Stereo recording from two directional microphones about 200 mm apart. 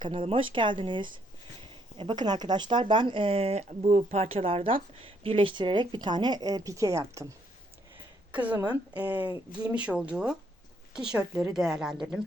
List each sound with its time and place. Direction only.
0.0 s a woman's voice: 25° right (ahead or behind); by 12.2 s centre (ahead or behind)